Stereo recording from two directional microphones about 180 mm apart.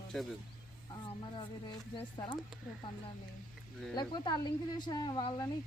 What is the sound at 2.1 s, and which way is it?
Speech, 25° left (ahead or behind).